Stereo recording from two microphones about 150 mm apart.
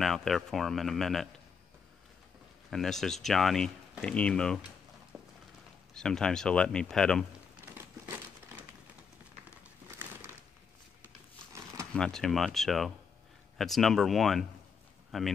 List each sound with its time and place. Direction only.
0.0 s speech: centre (ahead or behind)
2.7 s speech: centre (ahead or behind)
5.1 s a sound: centre (ahead or behind)
5.9 s speech: 5° left (ahead or behind)
7.6 s crumpling: 15° right (ahead or behind)
9.6 s crumpling: 15° right (ahead or behind)
11.5 s a sound: 20° right (ahead or behind)
11.9 s speech: 5° left (ahead or behind)